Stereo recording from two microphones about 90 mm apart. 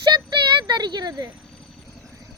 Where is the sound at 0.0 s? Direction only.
55° right (ahead or behind).